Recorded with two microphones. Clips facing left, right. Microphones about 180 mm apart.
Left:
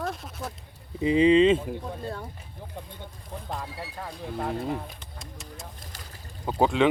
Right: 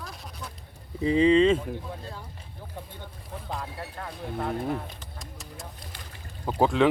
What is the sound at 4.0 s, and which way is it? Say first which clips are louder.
Speech: even; centre (ahead or behind).